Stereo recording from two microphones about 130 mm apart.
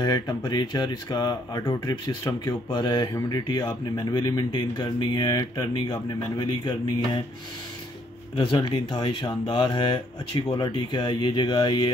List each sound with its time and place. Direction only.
0.0 s speech: 30° left (ahead or behind)
8.4 s speech: 35° left (ahead or behind)